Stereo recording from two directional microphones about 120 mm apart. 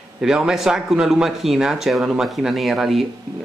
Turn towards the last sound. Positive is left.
turn(degrees=0)  # may be behind; listen again after turning